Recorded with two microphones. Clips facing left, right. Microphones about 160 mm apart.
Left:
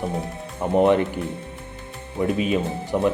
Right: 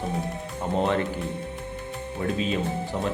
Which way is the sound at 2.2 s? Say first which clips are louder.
Left 5 dB; 15° left (ahead or behind).